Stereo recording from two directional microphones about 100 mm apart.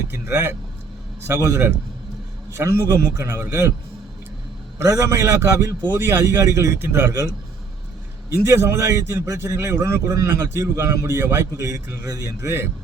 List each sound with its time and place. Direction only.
0.1 s a man's voice: 20° right (ahead or behind)
4.8 s a man's voice: 30° right (ahead or behind)
8.4 s a man's voice: 25° right (ahead or behind)